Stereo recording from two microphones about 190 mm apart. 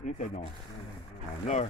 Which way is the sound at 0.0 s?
40° left (ahead or behind).